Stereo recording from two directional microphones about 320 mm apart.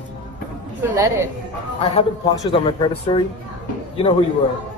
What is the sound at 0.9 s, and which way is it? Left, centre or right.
Speech, centre.